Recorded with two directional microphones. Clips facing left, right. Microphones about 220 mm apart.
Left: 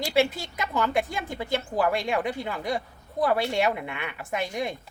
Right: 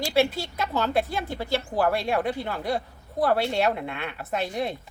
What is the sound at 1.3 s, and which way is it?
A woman's voice, 15° left (ahead or behind).